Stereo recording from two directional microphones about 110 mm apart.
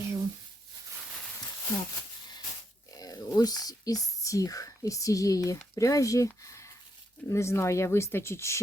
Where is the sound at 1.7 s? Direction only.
40° left (ahead or behind).